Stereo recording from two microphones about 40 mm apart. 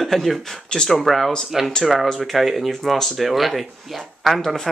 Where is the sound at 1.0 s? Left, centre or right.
Centre.